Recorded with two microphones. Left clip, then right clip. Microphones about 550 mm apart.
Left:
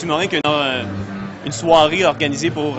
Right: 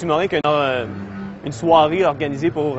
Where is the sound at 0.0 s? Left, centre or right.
Centre.